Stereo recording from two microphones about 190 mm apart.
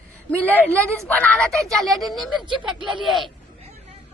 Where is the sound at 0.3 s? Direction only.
10° left (ahead or behind).